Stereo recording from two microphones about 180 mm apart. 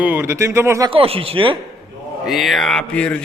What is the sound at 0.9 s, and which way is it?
Speech, 30° right (ahead or behind).